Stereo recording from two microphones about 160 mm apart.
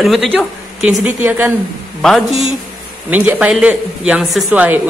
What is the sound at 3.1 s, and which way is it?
Speech, 10° right (ahead or behind).